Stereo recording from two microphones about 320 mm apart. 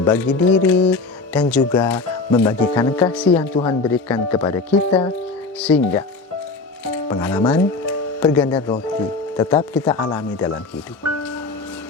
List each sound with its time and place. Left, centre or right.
0.0 s speech: centre
3.6 s speech: centre
3.9 s speech: centre
5.2 s speech: centre
7.1 s speech: centre
11.2 s music: centre